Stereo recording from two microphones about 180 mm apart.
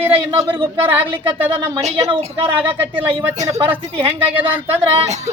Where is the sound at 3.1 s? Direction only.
40° right (ahead or behind).